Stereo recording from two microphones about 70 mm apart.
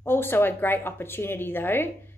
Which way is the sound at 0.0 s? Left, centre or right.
Left.